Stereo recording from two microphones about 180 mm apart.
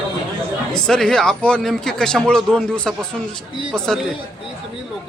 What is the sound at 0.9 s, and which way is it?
Speech, 5° left (ahead or behind).